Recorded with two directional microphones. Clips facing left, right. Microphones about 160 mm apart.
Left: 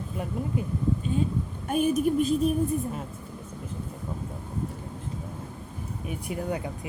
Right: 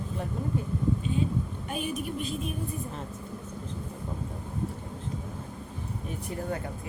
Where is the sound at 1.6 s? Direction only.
45° left (ahead or behind).